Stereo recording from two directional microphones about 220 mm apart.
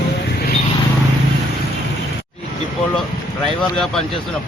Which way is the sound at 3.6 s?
Centre (ahead or behind).